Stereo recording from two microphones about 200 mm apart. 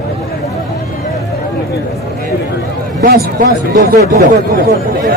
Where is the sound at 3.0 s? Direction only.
50° right (ahead or behind).